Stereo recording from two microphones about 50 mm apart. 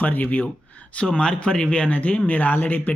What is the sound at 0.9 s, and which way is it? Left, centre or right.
Speech, left.